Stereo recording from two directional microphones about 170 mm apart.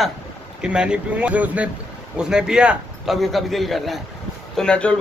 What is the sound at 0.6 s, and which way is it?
A man's voice, 5° right (ahead or behind).